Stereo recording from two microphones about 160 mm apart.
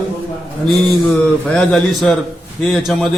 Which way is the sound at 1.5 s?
5° left (ahead or behind).